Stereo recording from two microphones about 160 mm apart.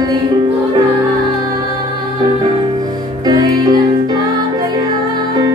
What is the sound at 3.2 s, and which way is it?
Music, 25° right (ahead or behind).